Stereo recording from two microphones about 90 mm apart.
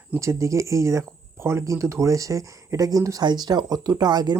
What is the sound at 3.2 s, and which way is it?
Speech, 50° right (ahead or behind).